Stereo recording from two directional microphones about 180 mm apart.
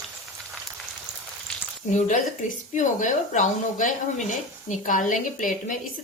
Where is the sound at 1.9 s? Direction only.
40° left (ahead or behind).